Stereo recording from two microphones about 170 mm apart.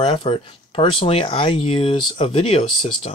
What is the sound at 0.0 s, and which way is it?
Speech, 30° left (ahead or behind).